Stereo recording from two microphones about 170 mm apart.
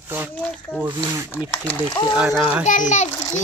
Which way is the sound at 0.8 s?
20° right (ahead or behind).